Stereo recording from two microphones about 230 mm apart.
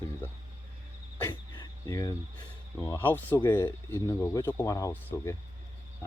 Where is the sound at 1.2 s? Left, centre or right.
Centre.